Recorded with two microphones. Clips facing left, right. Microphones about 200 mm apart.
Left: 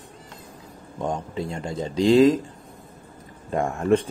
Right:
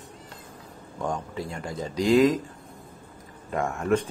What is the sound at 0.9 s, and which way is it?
Speech, 20° left (ahead or behind).